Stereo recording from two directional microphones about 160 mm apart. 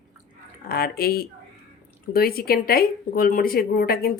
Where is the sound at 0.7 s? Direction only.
70° left (ahead or behind).